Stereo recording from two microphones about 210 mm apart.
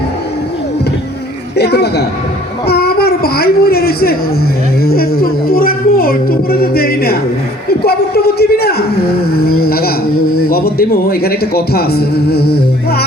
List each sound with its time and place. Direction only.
1.5 s a man's voice: 50° left (ahead or behind)
2.6 s a sound: 50° left (ahead or behind)
4.8 s a man's voice: 45° left (ahead or behind)